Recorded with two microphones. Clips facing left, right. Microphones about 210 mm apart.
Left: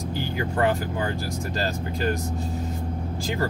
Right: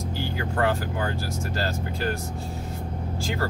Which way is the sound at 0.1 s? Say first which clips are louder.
Left 3 dB; 15° left (ahead or behind).